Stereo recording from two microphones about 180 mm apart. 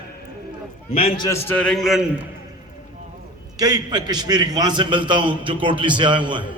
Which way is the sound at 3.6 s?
20° right (ahead or behind).